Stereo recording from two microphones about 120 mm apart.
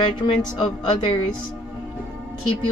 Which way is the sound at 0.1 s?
40° left (ahead or behind).